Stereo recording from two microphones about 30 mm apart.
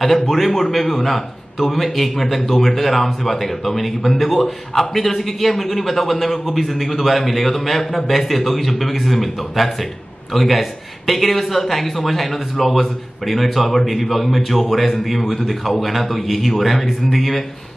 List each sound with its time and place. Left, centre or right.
0.0 s a man's voice: centre